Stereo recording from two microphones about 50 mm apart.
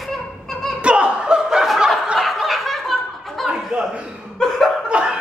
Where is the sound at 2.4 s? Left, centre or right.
Centre.